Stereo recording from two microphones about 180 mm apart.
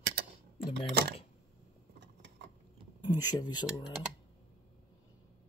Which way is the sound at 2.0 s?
75° right (ahead or behind).